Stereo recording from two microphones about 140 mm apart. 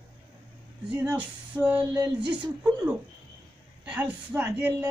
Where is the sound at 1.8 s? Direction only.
35° right (ahead or behind).